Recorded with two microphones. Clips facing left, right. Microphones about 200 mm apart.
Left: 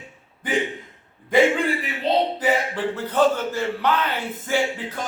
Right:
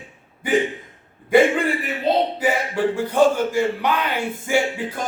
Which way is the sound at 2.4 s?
10° right (ahead or behind).